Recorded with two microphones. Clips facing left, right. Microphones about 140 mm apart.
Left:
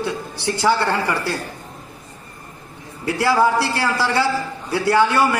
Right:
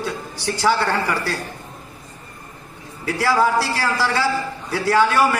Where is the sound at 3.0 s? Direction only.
15° left (ahead or behind).